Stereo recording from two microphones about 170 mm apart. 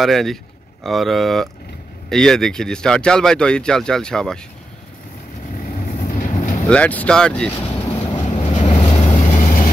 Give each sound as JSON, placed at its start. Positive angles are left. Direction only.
{"t": 0.0, "sound": "speech", "side_deg": 0}
{"t": 5.9, "sound": "vehicle", "side_deg": 45}
{"t": 6.7, "sound": "speech", "side_deg": 10}
{"t": 8.2, "sound": "vehicle", "side_deg": 40}
{"t": 9.3, "sound": "vehicle", "side_deg": 55}